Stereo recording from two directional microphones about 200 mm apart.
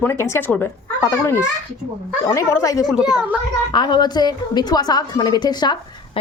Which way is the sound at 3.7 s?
20° left (ahead or behind).